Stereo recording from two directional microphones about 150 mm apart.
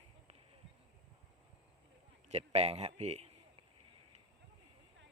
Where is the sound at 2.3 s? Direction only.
45° right (ahead or behind).